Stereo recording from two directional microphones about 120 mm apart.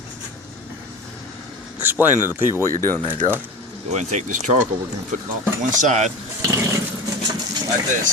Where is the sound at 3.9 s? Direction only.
75° right (ahead or behind).